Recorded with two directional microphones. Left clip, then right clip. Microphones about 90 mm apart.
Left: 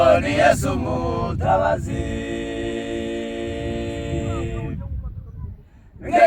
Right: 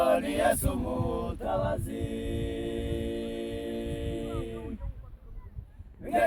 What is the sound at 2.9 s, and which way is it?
A capella, 50° left (ahead or behind).